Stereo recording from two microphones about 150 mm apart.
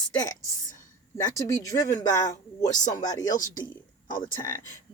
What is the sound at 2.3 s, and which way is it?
Speech, 55° left (ahead or behind).